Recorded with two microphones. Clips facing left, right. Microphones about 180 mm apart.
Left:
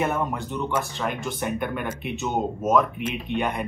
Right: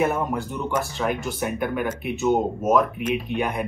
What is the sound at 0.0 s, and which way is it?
Speech, centre (ahead or behind).